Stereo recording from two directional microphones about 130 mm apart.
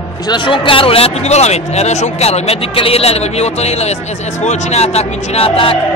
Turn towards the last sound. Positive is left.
turn(degrees=45)  # may be behind; listen again after turning